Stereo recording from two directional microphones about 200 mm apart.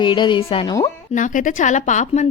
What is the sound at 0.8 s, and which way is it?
Speech, 40° left (ahead or behind).